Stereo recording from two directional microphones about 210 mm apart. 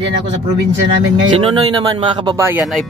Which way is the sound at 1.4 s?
25° right (ahead or behind).